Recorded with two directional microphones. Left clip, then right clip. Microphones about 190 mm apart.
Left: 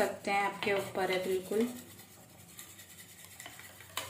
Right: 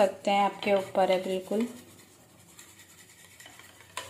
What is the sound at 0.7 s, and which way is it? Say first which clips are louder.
Speech: right 7 dB; 30° right (ahead or behind).